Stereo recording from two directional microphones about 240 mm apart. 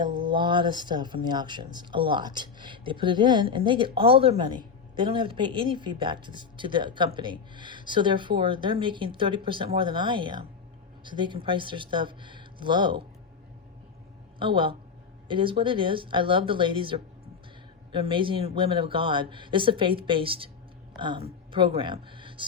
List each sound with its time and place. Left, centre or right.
0.0 s speech: centre
14.3 s speech: right